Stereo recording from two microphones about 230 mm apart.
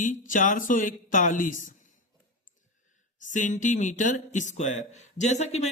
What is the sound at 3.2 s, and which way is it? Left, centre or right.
Speech, left.